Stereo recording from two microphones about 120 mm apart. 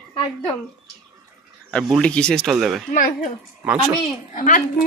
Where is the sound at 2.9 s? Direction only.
90° left.